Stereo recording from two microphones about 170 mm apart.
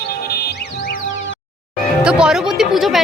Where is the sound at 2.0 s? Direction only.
5° right (ahead or behind).